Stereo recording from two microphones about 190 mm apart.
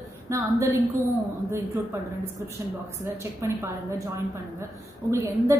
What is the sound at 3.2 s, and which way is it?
Speech, 15° right (ahead or behind).